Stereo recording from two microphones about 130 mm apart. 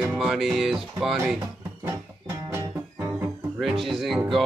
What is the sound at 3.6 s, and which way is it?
Speech, centre (ahead or behind).